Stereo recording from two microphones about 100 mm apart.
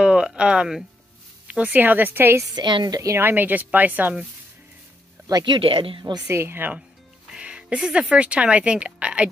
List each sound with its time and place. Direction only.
0.0 s a sound: 10° right (ahead or behind)
1.5 s a woman's voice: 15° right (ahead or behind)
2.5 s a woman's voice: 45° right (ahead or behind)
3.2 s a woman's voice: 20° right (ahead or behind)
5.4 s speech: 60° right (ahead or behind)
6.2 s speech: 25° right (ahead or behind)
7.3 s speech: 10° right (ahead or behind)